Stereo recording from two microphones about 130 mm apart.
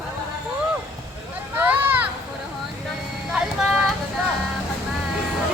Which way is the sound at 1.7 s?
15° right (ahead or behind).